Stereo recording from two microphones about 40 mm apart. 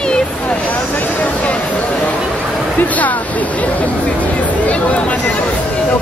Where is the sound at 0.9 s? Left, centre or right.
Left.